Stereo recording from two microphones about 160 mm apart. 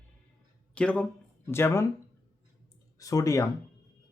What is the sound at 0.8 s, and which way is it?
Speech, 5° left (ahead or behind).